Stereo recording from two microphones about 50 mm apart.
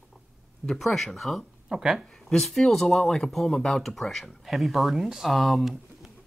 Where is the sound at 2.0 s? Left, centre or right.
Centre.